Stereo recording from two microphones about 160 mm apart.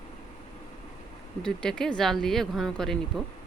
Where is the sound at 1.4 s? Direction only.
5° left (ahead or behind).